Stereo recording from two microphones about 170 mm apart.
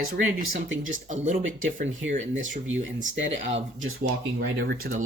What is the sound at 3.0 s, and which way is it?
Speech, 40° right (ahead or behind).